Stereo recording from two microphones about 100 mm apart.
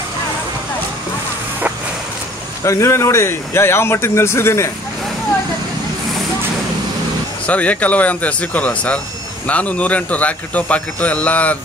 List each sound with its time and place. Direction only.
2.6 s speech: 30° left (ahead or behind)
7.4 s a man's voice: 15° left (ahead or behind)